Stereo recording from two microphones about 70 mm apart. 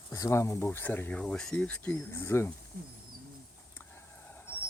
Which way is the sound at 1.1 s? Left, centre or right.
Centre.